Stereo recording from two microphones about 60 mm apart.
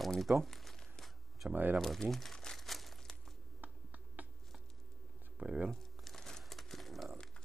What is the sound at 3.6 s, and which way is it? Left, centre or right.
Finger snapping, right.